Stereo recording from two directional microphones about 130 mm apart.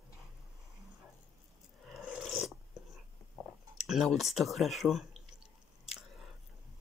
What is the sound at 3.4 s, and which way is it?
Chewing, 5° left (ahead or behind).